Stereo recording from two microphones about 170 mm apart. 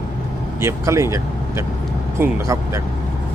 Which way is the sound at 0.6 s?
15° right (ahead or behind).